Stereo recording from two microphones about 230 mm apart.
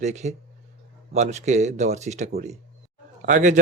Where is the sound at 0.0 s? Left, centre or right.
Right.